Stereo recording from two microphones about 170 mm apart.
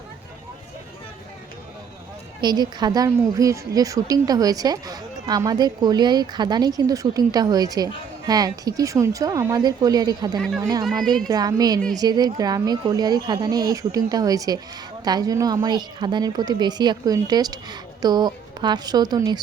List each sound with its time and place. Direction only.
2.4 s a woman's voice: 25° right (ahead or behind)
10.3 s speech: centre (ahead or behind)
11.3 s a woman's voice: 20° right (ahead or behind)